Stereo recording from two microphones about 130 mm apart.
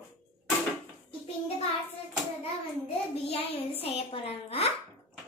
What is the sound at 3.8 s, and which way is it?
Speech, 50° left (ahead or behind).